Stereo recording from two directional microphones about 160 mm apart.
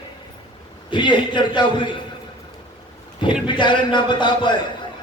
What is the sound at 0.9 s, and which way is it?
A man's voice, 30° left (ahead or behind).